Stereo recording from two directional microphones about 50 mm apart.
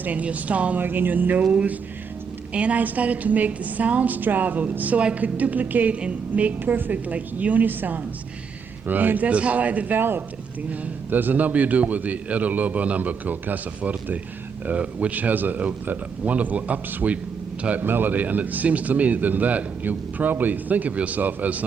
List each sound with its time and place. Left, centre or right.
0.0 s a woman's voice: right
0.8 s a woman's voice: right
6.6 s speech: right
10.0 s speech: right
17.7 s speech: right